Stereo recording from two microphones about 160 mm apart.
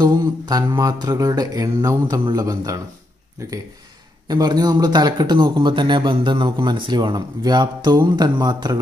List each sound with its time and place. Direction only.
0.0 s speech: 20° right (ahead or behind)